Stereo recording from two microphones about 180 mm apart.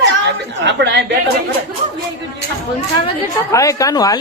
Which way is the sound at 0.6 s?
75° right (ahead or behind).